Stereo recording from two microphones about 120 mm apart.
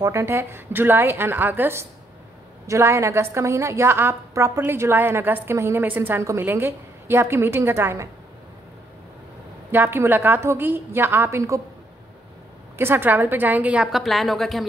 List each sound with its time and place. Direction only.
0.2 s a woman's voice: 20° right (ahead or behind)
9.7 s a woman's voice: 20° right (ahead or behind)
12.7 s a woman's voice: 20° right (ahead or behind); by 14.7 s centre (ahead or behind)